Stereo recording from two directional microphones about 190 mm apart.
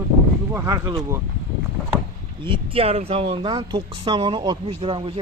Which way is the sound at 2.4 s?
30° right (ahead or behind).